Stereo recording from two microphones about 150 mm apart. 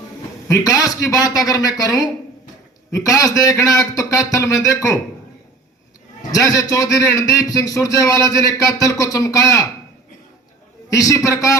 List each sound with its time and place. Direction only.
0.4 s a man's voice: 20° left (ahead or behind)
6.3 s a man's voice: 25° left (ahead or behind)
10.8 s a man's voice: 20° left (ahead or behind)